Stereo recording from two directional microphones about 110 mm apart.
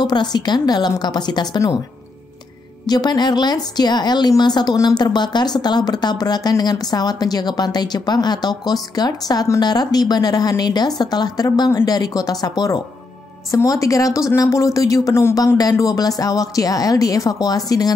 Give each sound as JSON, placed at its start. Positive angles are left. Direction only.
{"t": 0.0, "sound": "speech", "side_deg": 40}
{"t": 2.9, "sound": "speech", "side_deg": 40}